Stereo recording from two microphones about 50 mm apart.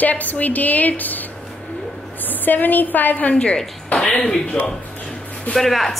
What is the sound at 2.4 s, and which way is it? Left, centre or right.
A woman's voice, left.